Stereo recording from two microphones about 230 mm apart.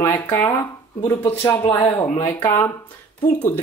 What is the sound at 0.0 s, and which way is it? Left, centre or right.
Speech, centre.